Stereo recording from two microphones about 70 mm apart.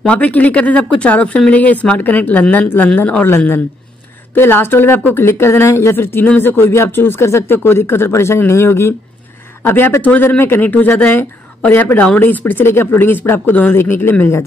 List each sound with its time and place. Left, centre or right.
0.0 s speech: centre
3.3 s speech: left